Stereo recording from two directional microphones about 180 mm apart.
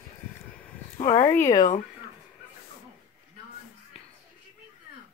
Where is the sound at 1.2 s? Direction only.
15° left (ahead or behind).